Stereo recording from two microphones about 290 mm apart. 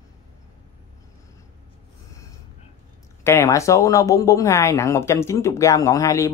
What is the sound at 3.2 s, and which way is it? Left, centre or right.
Speech, centre.